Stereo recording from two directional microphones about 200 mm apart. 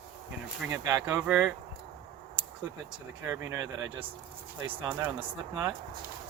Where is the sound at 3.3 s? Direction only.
20° right (ahead or behind).